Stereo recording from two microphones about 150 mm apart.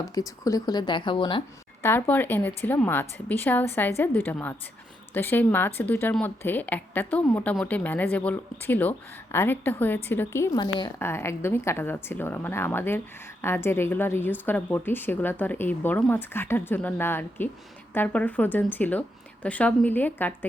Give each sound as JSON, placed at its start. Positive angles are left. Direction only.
{"t": 0.1, "sound": "speech", "side_deg": 25}
{"t": 1.8, "sound": "a woman's voice", "side_deg": 15}
{"t": 10.6, "sound": "speech", "side_deg": 30}
{"t": 11.0, "sound": "a woman's voice", "side_deg": 15}